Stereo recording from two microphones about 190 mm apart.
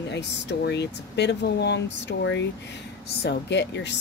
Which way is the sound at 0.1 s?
65° left (ahead or behind).